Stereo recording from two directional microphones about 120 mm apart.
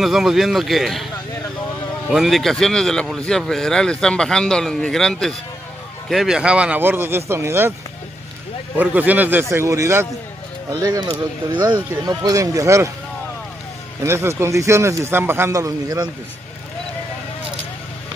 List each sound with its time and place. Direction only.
0.0 s speech: 5° right (ahead or behind)
2.0 s speech: centre (ahead or behind); by 7.7 s 20° right (ahead or behind)
8.7 s speech: 15° right (ahead or behind)
10.7 s speech: 35° right (ahead or behind)
14.0 s speech: 20° right (ahead or behind)